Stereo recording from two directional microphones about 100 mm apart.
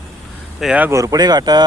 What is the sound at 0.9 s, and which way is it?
Speech, 35° right (ahead or behind).